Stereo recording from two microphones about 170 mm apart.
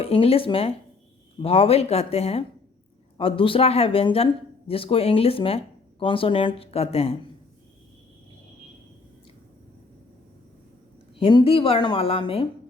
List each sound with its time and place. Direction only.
0.0 s speech: 35° left (ahead or behind)
11.2 s speech: 30° left (ahead or behind)